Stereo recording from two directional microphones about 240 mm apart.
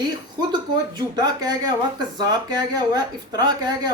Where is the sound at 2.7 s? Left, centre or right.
Centre.